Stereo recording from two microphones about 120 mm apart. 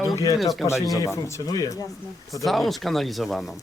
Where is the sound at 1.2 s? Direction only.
25° left (ahead or behind).